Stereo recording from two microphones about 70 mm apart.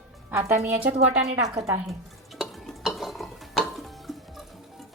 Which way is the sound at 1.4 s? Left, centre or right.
Right.